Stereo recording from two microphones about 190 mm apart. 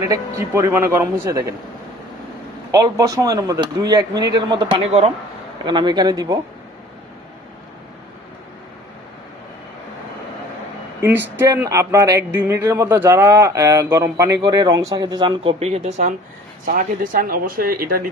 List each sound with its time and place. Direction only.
0.1 s speech: 15° right (ahead or behind)
2.7 s speech: 20° right (ahead or behind)
11.0 s speech: 10° right (ahead or behind); by 18.1 s 50° right (ahead or behind)